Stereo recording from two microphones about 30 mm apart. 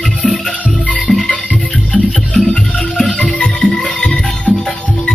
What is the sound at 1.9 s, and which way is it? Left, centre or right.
Music, left.